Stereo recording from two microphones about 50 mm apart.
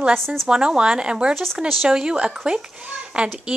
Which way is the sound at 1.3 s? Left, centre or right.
Centre.